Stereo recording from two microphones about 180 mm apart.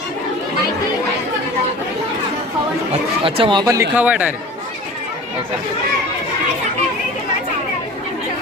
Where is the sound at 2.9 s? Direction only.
30° right (ahead or behind); by 4.4 s 5° right (ahead or behind).